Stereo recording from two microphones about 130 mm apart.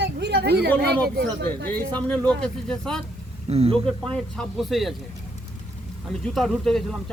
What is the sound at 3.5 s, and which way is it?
Speech, 50° right (ahead or behind).